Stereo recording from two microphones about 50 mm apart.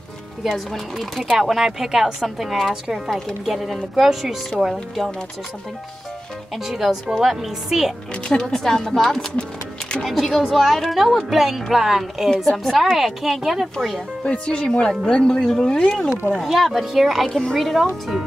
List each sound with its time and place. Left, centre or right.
0.5 s speech: centre
6.5 s speech: centre
8.3 s speech: centre
9.4 s music: centre
10.0 s speech: centre
14.2 s speech: left
16.3 s speech: centre